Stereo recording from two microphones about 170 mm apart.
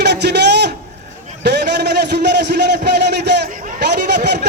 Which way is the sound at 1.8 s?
85° right.